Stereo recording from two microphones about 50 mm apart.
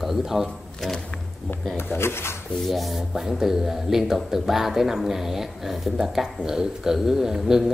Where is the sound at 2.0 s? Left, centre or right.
Left.